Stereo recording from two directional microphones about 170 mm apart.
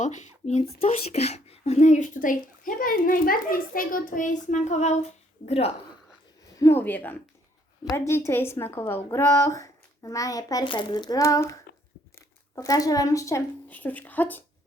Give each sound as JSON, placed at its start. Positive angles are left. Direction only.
{"t": 0.0, "sound": "a woman's voice", "side_deg": 45}
{"t": 6.6, "sound": "a woman's voice", "side_deg": 15}